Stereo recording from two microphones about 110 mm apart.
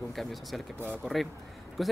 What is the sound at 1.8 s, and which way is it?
Speech, centre (ahead or behind).